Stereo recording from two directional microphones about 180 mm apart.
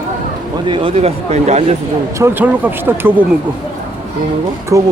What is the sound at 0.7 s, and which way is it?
Speech, 30° right (ahead or behind).